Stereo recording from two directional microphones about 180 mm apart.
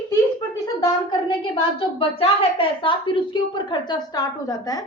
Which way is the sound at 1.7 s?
30° left (ahead or behind).